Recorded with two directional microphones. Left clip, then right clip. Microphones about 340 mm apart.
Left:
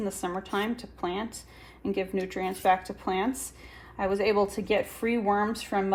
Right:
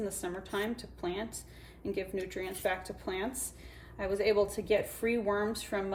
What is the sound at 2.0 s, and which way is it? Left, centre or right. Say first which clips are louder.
Speech: left 7 dB; centre.